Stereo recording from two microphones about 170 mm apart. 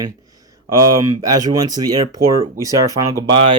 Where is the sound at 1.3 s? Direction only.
25° right (ahead or behind).